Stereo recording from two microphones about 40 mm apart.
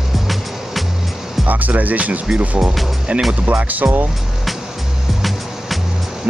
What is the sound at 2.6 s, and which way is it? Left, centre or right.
Speech, centre.